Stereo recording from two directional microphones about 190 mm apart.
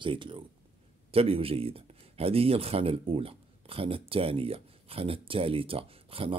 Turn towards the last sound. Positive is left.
turn(degrees=-30)  # may be behind; listen again after turning